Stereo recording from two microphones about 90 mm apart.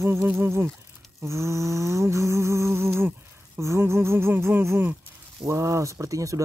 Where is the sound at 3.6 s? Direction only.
30° right (ahead or behind).